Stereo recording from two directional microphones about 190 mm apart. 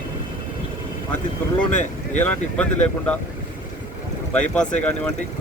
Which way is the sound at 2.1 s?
10° left (ahead or behind).